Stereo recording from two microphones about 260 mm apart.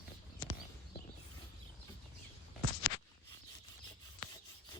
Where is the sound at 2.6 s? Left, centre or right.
Right.